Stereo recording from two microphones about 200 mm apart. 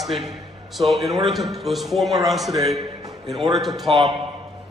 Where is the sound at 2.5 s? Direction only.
20° right (ahead or behind).